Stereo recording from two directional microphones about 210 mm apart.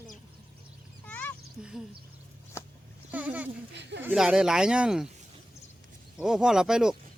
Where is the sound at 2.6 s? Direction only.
10° left (ahead or behind).